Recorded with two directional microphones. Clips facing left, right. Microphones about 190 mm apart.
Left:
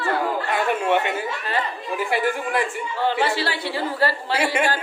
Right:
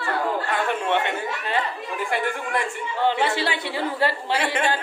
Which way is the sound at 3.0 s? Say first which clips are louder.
Even; 20° right (ahead or behind).